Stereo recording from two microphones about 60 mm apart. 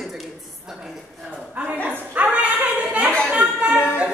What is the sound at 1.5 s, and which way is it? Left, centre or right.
Dog, right.